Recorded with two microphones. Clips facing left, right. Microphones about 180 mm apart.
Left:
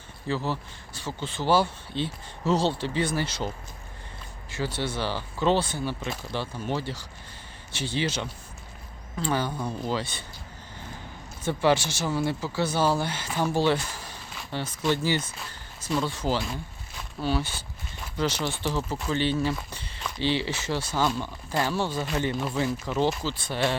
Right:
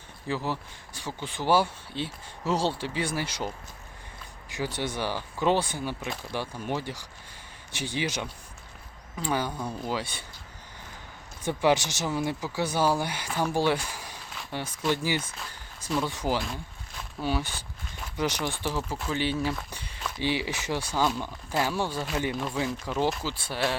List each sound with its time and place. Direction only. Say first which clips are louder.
0.3 s speech: left 2 dB; 15° right (ahead or behind)
11.4 s speech: left 1 dB; 15° right (ahead or behind); by 23.0 s centre (ahead or behind)
23.2 s speech: left 2 dB; 10° right (ahead or behind)